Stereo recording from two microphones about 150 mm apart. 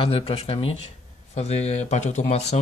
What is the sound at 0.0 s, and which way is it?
Speech, 40° left (ahead or behind).